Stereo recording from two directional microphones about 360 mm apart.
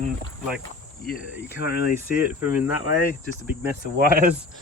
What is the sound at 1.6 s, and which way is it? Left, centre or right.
Speech, left.